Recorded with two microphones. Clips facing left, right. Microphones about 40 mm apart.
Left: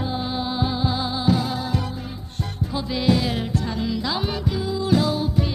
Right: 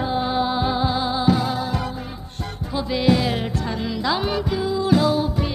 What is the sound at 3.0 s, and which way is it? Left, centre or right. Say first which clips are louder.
Music: right 2 dB; right.